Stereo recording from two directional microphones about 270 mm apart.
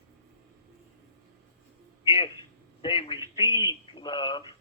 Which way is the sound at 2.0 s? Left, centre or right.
Centre.